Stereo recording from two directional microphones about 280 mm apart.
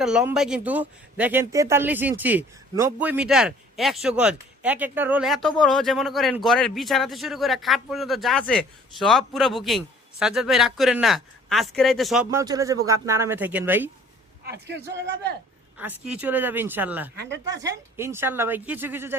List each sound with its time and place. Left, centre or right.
0.0 s speech: centre
14.4 s a man's voice: right
15.8 s speech: centre
17.2 s a man's voice: right
17.9 s speech: centre